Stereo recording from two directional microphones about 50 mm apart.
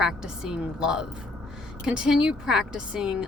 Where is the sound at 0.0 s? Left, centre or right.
Centre.